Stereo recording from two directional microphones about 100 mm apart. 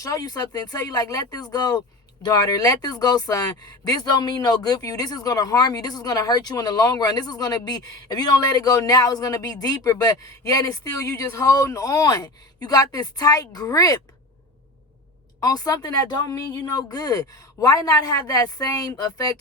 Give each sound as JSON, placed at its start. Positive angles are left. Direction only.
{"t": 0.0, "sound": "speech", "side_deg": 35}
{"t": 15.4, "sound": "speech", "side_deg": 35}